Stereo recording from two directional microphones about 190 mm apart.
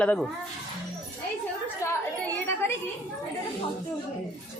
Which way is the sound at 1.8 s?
15° left (ahead or behind).